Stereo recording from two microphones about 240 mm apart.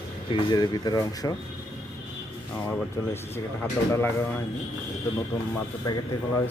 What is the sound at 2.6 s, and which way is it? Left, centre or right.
Speech, centre.